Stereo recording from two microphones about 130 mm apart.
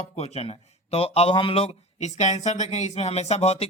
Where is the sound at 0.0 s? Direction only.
55° left (ahead or behind).